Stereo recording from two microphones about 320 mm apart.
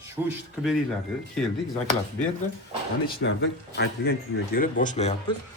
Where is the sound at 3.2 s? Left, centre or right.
Left.